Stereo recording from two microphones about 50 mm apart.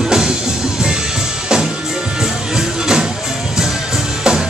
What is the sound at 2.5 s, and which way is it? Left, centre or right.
Music, centre.